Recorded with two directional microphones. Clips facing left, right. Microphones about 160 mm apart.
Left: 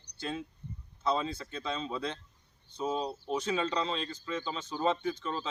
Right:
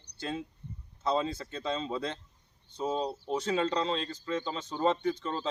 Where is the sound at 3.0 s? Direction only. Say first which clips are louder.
Right 1 dB; 10° left (ahead or behind).